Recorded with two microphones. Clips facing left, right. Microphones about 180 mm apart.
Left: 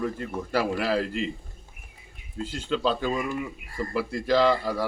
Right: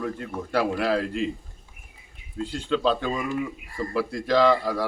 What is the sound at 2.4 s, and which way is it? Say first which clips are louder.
A man's voice: right 2 dB; centre (ahead or behind).